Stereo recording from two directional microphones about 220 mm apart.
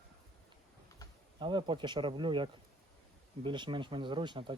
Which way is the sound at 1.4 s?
20° right (ahead or behind).